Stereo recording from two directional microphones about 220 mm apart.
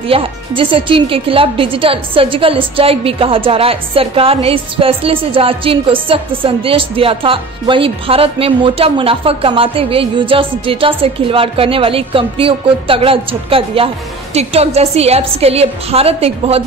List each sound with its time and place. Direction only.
0.1 s speech: 25° right (ahead or behind)